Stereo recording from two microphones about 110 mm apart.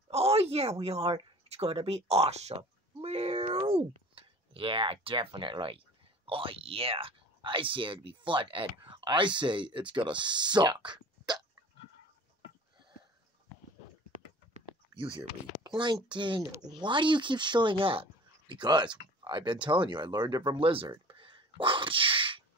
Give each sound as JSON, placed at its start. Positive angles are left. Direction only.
{"t": 0.1, "sound": "speech", "side_deg": -70}
{"t": 15.0, "sound": "speech", "side_deg": -45}
{"t": 18.5, "sound": "speech", "side_deg": -45}